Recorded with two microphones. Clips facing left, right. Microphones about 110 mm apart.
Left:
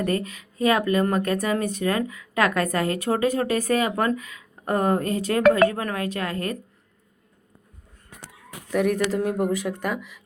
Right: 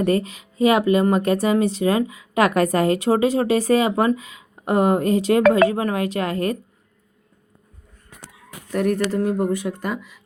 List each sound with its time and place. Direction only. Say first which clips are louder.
0.0 s a woman's voice: right 5 dB; 25° right (ahead or behind)
8.7 s speech: right 1 dB; centre (ahead or behind)